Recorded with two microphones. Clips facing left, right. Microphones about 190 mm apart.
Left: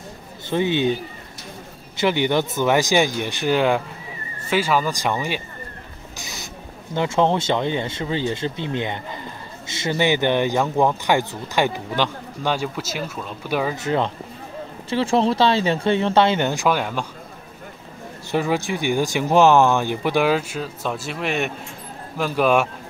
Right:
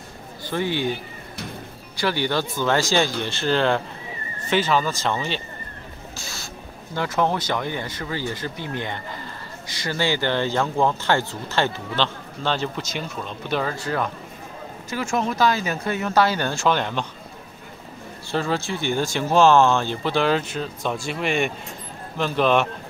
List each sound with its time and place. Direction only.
0.5 s speech: 20° left (ahead or behind)
2.0 s speech: 20° left (ahead or behind)
6.1 s a sound: 20° left (ahead or behind)
7.0 s speech: 25° left (ahead or behind)
13.7 s speech: 20° left (ahead or behind)
18.3 s speech: 15° left (ahead or behind)